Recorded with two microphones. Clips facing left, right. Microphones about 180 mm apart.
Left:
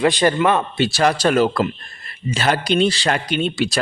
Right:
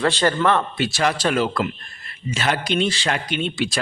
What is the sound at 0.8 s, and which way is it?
A man's voice, 35° left (ahead or behind).